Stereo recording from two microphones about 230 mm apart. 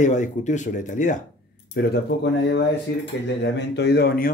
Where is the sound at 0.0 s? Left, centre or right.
Left.